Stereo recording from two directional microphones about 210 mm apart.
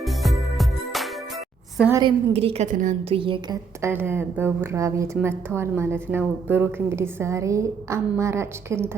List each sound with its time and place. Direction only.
0.0 s music: centre (ahead or behind)
2.0 s a woman's voice: 25° right (ahead or behind)
3.8 s a woman's voice: 10° right (ahead or behind)